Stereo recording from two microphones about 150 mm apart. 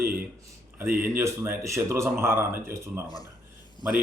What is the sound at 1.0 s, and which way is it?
Speech, 15° right (ahead or behind).